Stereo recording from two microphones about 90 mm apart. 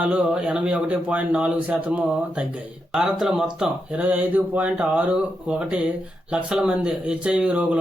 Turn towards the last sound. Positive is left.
turn(degrees=-10)  # may be behind; listen again after turning